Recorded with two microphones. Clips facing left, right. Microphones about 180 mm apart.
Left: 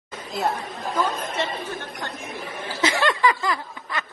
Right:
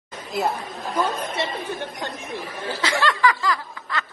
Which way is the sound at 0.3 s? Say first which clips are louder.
Right 1 dB; centre (ahead or behind).